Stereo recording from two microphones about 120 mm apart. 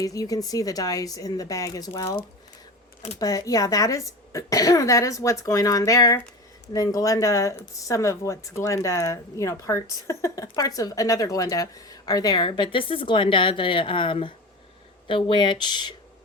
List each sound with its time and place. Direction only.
0.0 s speech: 30° left (ahead or behind)
3.2 s speech: 30° left (ahead or behind)